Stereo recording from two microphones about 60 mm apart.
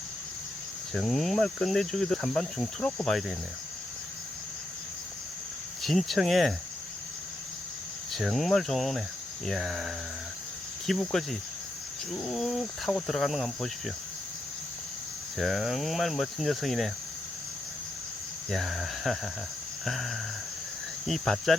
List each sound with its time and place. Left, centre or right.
0.9 s speech: centre
5.8 s speech: centre
8.2 s speech: centre
15.4 s speech: centre
18.5 s speech: centre